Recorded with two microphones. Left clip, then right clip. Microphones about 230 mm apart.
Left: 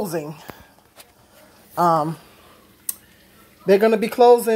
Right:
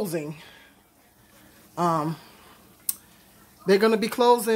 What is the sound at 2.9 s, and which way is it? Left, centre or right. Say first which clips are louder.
Tick: even; centre.